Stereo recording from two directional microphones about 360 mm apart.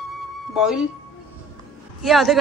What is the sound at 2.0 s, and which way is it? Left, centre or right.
Speech, centre.